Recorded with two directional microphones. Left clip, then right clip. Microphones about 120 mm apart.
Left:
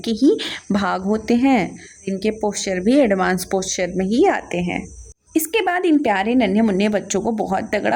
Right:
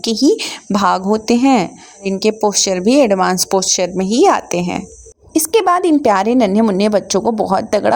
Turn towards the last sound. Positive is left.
turn(degrees=-55)  # may be behind; listen again after turning